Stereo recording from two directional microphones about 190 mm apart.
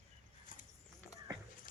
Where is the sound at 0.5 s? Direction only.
45° left (ahead or behind).